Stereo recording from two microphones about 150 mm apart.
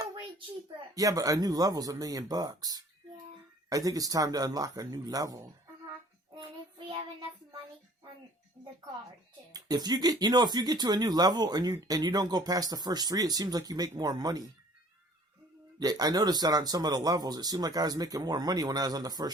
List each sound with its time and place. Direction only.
0.9 s speech: 25° right (ahead or behind)
6.3 s child singing: 30° right (ahead or behind)
9.5 s speech: 25° right (ahead or behind)
15.8 s speech: 25° right (ahead or behind)